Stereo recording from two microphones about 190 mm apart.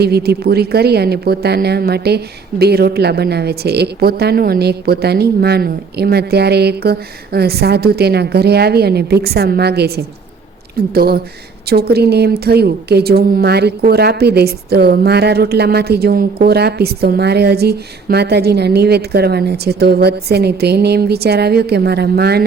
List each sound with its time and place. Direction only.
0.0 s a woman's voice: 55° right (ahead or behind)